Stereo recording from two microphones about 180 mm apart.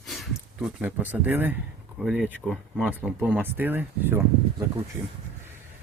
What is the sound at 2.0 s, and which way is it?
Speech, 5° right (ahead or behind).